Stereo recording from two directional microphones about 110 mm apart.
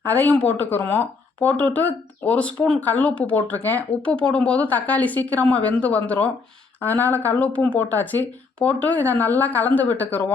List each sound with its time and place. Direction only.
0.0 s speech: 15° left (ahead or behind)